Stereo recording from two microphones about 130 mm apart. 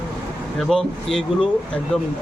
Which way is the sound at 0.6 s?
Centre (ahead or behind).